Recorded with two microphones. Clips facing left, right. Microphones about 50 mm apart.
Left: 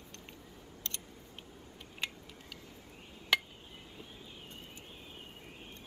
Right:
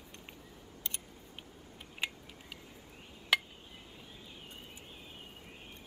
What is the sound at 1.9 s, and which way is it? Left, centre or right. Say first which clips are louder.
Tick-tock: right 2 dB; centre.